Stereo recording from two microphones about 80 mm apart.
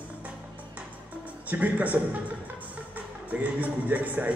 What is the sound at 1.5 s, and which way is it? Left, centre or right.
Speech, centre.